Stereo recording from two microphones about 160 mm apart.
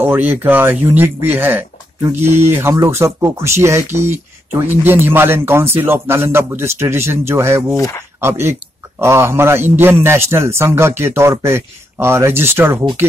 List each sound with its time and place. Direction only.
0.0 s speech: 10° right (ahead or behind)